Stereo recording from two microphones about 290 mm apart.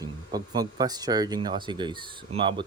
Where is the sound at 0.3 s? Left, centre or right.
Centre.